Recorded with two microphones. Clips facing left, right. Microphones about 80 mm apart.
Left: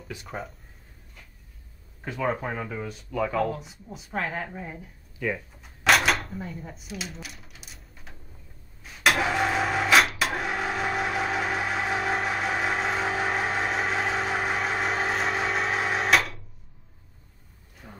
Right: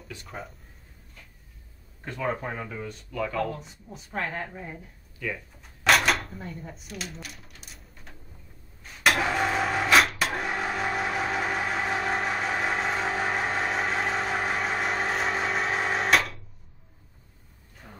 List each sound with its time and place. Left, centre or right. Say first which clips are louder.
0.1 s speech: left 4 dB; centre
2.0 s speech: left 2 dB; centre
5.6 s a sound: even; centre
8.8 s vehicle: left 1 dB; centre
17.8 s roaring cats: left 2 dB; centre